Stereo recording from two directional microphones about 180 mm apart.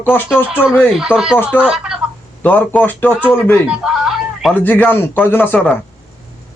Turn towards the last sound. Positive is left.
turn(degrees=10)  # may be behind; listen again after turning